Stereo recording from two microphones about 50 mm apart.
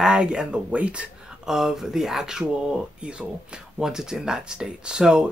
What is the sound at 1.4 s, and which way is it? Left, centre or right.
Speech, centre.